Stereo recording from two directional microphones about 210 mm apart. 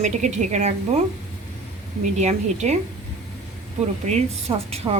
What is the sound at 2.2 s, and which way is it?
Speech, 30° right (ahead or behind).